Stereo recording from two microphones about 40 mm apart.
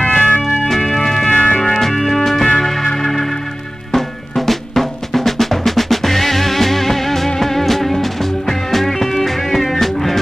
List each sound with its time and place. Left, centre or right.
0.1 s organ: left
0.4 s music: centre
1.3 s music: left
1.6 s music: centre